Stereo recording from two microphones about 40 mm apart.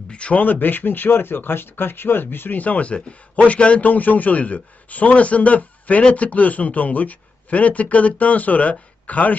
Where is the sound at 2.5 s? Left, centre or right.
Left.